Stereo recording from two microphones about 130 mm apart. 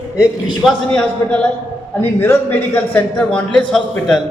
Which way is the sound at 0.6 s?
5° left (ahead or behind).